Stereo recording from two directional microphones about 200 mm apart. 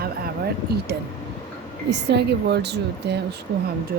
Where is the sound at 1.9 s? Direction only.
55° right (ahead or behind).